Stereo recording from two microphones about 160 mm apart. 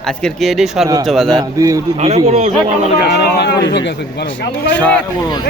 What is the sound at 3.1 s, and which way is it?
Speech, 90° left.